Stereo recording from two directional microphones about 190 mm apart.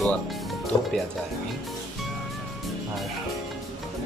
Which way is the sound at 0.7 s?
20° left (ahead or behind).